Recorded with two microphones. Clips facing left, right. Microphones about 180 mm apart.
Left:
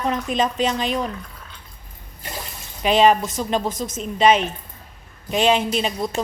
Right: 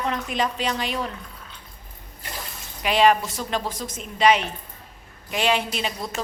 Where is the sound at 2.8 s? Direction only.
20° left (ahead or behind).